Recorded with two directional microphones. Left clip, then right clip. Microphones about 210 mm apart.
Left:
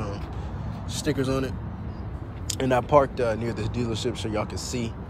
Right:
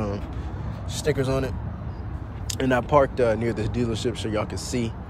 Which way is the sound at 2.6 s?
35° left (ahead or behind).